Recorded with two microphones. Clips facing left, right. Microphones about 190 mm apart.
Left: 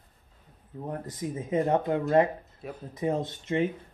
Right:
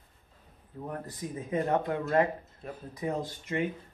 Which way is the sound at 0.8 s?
20° left (ahead or behind).